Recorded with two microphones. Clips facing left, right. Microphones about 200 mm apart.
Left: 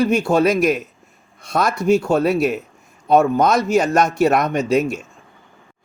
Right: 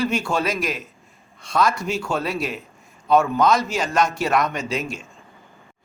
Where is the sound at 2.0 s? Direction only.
50° left (ahead or behind).